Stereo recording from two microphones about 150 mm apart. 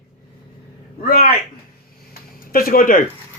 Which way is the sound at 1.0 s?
80° left.